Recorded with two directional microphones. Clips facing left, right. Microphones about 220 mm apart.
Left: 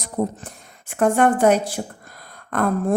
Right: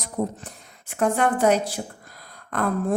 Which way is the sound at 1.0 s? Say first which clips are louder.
Left 4 dB; 50° left (ahead or behind).